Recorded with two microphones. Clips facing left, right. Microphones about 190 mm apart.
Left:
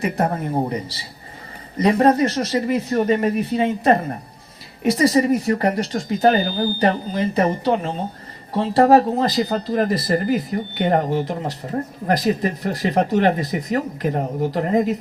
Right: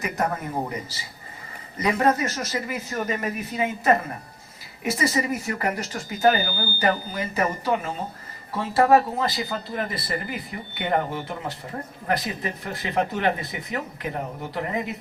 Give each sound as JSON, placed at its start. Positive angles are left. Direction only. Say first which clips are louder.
{"t": 0.0, "sound": "speech", "louder": "left 5 dB", "side_deg": 30}